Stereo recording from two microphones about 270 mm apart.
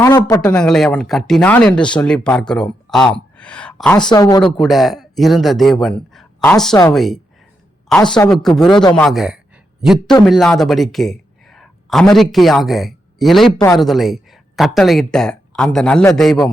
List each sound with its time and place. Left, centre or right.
0.0 s speech: centre
4.5 s speech: centre
8.7 s speech: centre
9.0 s speech: centre